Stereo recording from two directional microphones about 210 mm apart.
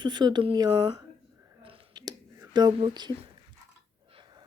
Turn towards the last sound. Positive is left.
turn(degrees=-20)  # may be behind; listen again after turning